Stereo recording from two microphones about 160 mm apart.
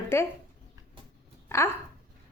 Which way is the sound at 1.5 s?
15° left (ahead or behind).